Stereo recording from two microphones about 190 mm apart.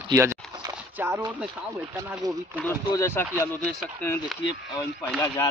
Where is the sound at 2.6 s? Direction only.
15° left (ahead or behind).